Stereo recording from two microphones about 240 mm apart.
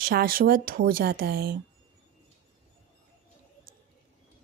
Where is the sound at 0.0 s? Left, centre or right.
Right.